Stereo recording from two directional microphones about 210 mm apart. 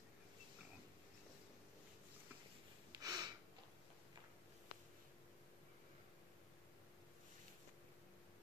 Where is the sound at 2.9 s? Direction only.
15° right (ahead or behind).